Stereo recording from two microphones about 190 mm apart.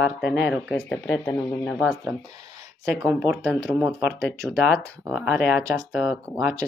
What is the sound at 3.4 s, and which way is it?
Speech, 5° left (ahead or behind).